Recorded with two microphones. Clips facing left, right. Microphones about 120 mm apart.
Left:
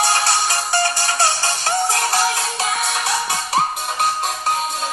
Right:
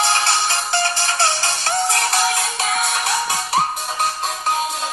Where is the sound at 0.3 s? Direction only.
15° left (ahead or behind).